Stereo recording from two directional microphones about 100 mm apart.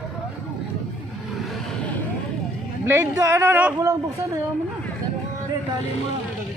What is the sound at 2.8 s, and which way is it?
Speech, 25° right (ahead or behind).